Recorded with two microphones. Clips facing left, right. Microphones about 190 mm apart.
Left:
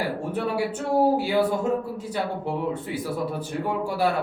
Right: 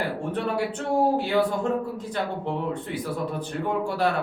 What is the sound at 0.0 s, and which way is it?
Speech, 10° left (ahead or behind).